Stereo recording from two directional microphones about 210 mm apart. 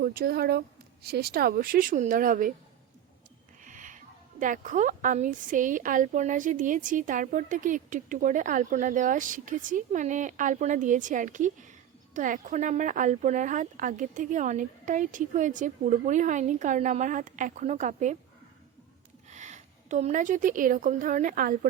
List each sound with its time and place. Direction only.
0.0 s a woman's voice: 45° right (ahead or behind)
3.6 s speech: 40° right (ahead or behind)
19.3 s a woman's voice: 35° right (ahead or behind)